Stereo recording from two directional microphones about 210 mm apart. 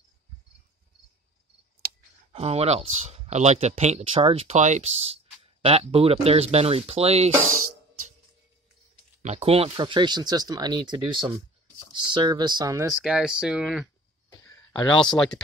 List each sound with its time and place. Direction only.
2.3 s speech: 30° right (ahead or behind)
7.4 s speech: 90° right
9.2 s speech: 30° right (ahead or behind)
13.0 s speech: 5° right (ahead or behind)
14.5 s a sound: 20° left (ahead or behind)